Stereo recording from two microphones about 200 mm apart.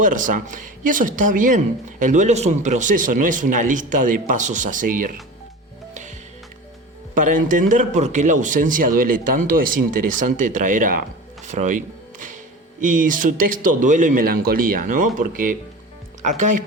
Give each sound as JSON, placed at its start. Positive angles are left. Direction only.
{"t": 0.0, "sound": "a woman's voice", "side_deg": -40}
{"t": 7.1, "sound": "a woman's voice", "side_deg": -40}